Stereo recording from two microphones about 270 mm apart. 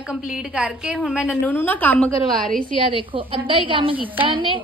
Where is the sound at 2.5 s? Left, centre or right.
Right.